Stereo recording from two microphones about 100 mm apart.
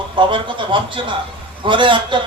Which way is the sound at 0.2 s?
55° right (ahead or behind).